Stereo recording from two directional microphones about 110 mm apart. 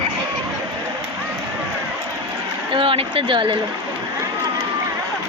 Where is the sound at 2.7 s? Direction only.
55° right (ahead or behind).